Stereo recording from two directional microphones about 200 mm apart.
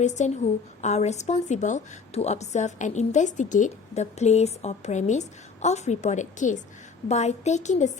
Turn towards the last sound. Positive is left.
turn(degrees=35)  # may be behind; listen again after turning